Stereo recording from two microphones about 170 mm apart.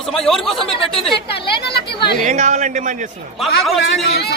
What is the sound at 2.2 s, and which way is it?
Speech, 45° right (ahead or behind).